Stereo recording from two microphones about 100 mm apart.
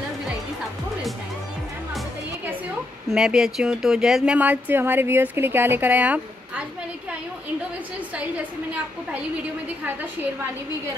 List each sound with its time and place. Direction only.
3.1 s speech: 5° right (ahead or behind)
4.4 s a woman's voice: 15° right (ahead or behind)
9.1 s a woman's voice: 15° right (ahead or behind)